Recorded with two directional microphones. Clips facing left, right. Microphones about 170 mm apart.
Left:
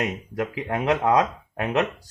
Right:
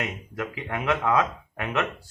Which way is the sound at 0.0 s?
35° left (ahead or behind).